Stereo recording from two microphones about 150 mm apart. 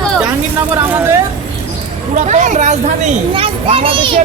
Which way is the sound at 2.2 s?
55° right (ahead or behind).